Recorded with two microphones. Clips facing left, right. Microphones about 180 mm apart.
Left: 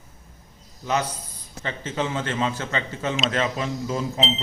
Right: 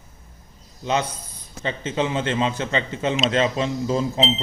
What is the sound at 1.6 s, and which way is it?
A man's voice, 20° right (ahead or behind).